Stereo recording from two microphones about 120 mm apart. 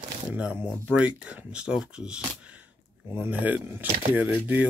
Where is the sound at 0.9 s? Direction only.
10° right (ahead or behind).